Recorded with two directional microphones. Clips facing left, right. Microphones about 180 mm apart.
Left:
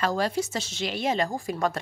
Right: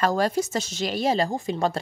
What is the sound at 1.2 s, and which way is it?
Speech, 25° right (ahead or behind).